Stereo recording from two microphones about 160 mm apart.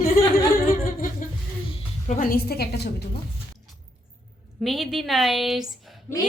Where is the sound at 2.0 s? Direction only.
55° left (ahead or behind); by 2.9 s 85° left.